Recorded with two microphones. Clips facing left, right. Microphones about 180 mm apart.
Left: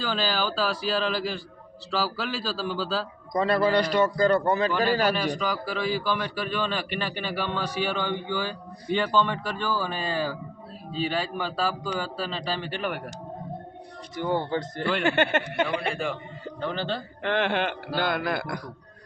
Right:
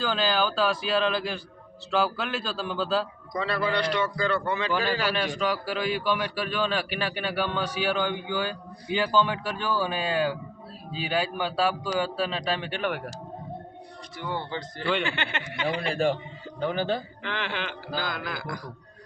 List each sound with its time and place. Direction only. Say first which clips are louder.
0.0 s a man's voice: right 2 dB; centre (ahead or behind)
3.3 s a man's voice: left 5 dB; 45° left (ahead or behind)
5.1 s a man's voice: even; centre (ahead or behind)
14.2 s a man's voice: left 6 dB; 45° left (ahead or behind)
16.6 s a man's voice: right 3 dB; 15° right (ahead or behind)
17.2 s a man's voice: left 10 dB; 55° left (ahead or behind)